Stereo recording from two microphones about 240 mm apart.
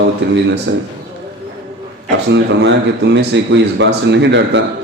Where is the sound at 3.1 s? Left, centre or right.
Right.